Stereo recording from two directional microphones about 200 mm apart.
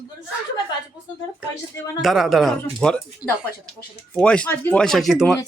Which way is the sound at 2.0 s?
Centre (ahead or behind).